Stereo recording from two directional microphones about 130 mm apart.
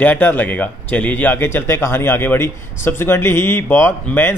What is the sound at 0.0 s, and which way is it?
A man's voice, 15° left (ahead or behind).